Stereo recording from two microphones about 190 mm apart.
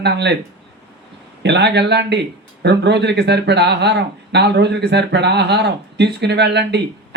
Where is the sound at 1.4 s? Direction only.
60° right (ahead or behind).